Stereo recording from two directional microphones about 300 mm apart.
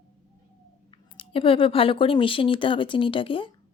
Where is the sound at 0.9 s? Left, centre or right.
Centre.